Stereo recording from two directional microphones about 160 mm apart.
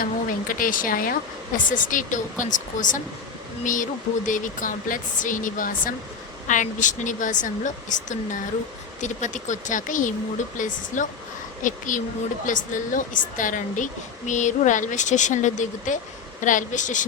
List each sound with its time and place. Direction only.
0.0 s a woman's voice: 60° left (ahead or behind)